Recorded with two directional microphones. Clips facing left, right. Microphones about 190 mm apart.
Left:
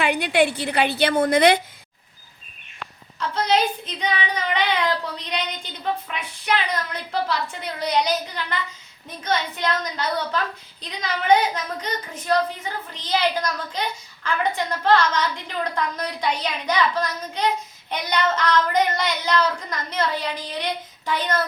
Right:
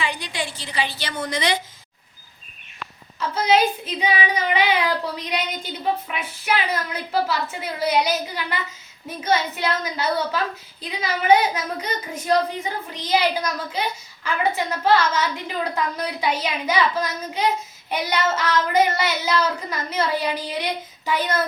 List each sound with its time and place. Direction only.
0.0 s a woman's voice: 60° left (ahead or behind)
3.2 s speech: 5° right (ahead or behind)